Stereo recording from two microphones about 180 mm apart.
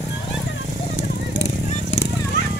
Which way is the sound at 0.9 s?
90° left.